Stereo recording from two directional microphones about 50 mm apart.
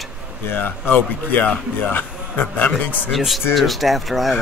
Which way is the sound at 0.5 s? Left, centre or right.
Left.